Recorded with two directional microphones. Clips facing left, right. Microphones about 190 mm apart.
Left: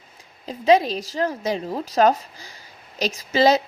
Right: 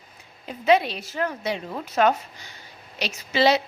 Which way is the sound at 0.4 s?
35° left (ahead or behind).